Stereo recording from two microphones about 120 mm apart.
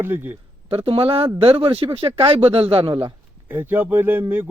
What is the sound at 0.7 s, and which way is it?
Speech, 50° right (ahead or behind).